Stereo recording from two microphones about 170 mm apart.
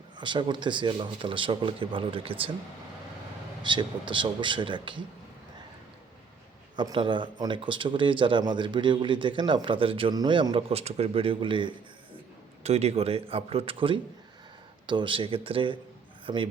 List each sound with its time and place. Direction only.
0.2 s a man's voice: 25° right (ahead or behind)
3.6 s a man's voice: 25° right (ahead or behind)
6.7 s a man's voice: 25° right (ahead or behind)
12.6 s a man's voice: 40° right (ahead or behind)